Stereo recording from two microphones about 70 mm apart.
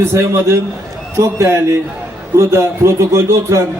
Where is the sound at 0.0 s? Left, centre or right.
Right.